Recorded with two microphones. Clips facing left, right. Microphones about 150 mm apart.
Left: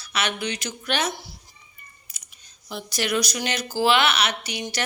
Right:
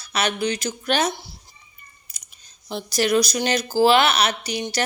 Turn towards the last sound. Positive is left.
turn(degrees=-35)  # may be behind; listen again after turning